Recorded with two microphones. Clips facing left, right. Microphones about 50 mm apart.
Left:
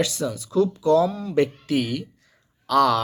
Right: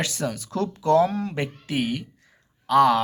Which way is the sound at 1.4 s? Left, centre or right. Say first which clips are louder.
Left 10 dB; right.